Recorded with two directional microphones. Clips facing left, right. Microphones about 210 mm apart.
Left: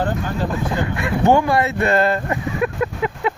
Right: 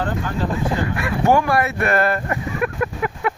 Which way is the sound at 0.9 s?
20° left (ahead or behind).